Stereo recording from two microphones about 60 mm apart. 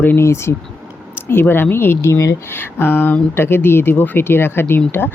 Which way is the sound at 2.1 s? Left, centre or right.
Left.